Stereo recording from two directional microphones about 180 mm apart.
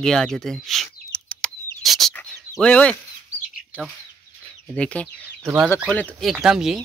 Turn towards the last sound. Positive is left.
turn(degrees=0)  # may be behind; listen again after turning